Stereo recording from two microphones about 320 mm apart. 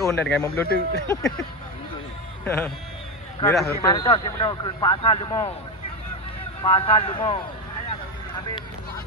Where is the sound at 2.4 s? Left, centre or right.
Centre.